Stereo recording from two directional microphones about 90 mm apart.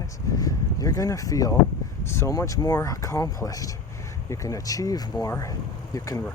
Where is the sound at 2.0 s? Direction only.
30° left (ahead or behind).